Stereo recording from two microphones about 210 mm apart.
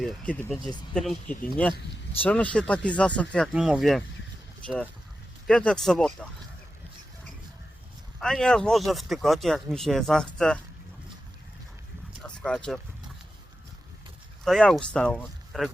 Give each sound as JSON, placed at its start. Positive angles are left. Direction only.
{"t": 0.0, "sound": "speech", "side_deg": 5}
{"t": 0.6, "sound": "speech", "side_deg": 20}
{"t": 0.9, "sound": "speech", "side_deg": 5}
{"t": 5.5, "sound": "speech", "side_deg": 5}
{"t": 8.2, "sound": "speech", "side_deg": 5}
{"t": 12.2, "sound": "a sound", "side_deg": 5}
{"t": 14.4, "sound": "speech", "side_deg": 0}